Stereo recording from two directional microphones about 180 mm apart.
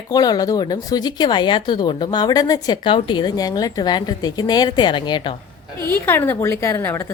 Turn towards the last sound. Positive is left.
turn(degrees=15)  # may be behind; listen again after turning